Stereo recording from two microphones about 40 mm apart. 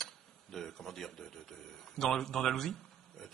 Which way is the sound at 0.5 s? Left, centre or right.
Centre.